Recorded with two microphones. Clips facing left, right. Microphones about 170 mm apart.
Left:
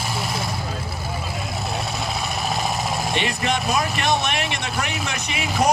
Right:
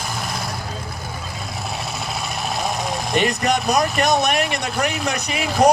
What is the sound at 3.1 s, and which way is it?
Speech, 45° right (ahead or behind).